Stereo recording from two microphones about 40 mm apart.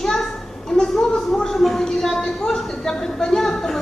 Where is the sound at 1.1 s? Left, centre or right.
Left.